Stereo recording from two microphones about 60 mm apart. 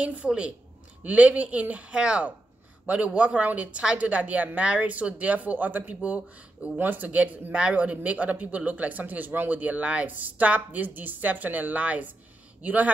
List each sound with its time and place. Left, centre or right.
0.0 s speech: right